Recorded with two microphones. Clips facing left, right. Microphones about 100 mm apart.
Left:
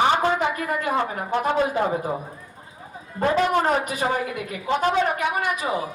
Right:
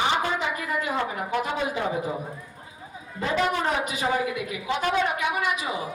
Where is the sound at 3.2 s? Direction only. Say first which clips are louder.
Left 5 dB; 45° left (ahead or behind).